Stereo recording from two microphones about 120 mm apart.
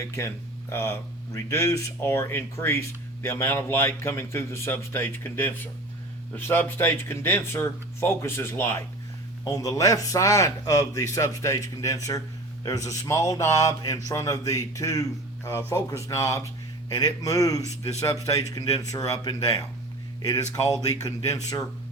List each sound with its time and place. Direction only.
0.2 s a man's voice: 20° left (ahead or behind)